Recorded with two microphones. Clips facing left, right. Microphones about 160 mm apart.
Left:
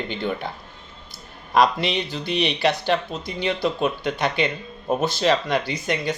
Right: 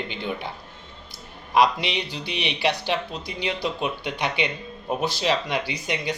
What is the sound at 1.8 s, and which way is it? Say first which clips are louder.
Speech: left 4 dB; 45° left (ahead or behind).